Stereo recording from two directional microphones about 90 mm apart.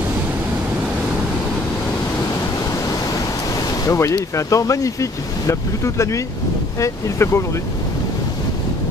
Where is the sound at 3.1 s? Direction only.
40° left (ahead or behind).